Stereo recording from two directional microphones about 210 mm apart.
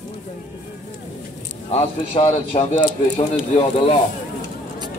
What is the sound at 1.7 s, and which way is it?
A man's voice, 30° left (ahead or behind).